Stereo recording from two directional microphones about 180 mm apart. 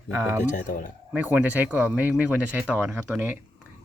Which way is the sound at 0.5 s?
45° left (ahead or behind).